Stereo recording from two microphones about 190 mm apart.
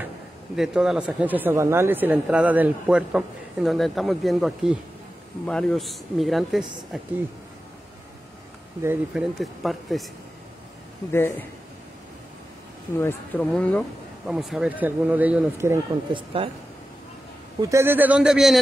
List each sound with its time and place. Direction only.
0.6 s speech: 5° right (ahead or behind)
8.8 s speech: centre (ahead or behind)
11.1 s speech: 10° left (ahead or behind)
13.0 s speech: 10° left (ahead or behind); by 15.8 s 15° right (ahead or behind)
16.1 s speech: 25° right (ahead or behind)
17.6 s speech: 15° right (ahead or behind)